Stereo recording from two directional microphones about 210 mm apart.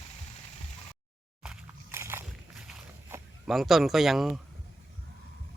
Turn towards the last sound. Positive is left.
turn(degrees=0)  # may be behind; listen again after turning